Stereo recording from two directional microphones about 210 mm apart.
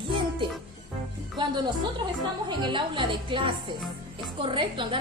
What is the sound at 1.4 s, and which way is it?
Speech, 20° right (ahead or behind).